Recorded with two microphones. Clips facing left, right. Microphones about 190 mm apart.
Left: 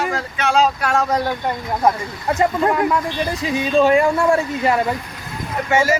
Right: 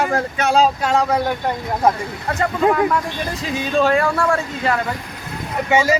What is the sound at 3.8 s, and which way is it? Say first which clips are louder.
Speech: left 2 dB; 15° left (ahead or behind).